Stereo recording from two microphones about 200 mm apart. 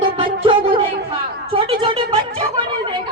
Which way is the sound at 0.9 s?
50° right (ahead or behind).